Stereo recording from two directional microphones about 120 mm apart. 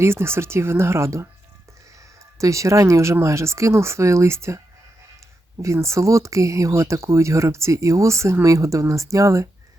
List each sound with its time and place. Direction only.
0.0 s speech: 20° right (ahead or behind)
5.6 s speech: 25° right (ahead or behind)